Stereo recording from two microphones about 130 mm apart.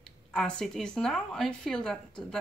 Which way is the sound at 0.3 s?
5° left (ahead or behind).